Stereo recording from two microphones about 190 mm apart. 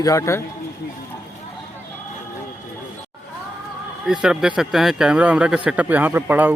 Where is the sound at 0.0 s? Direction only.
15° left (ahead or behind).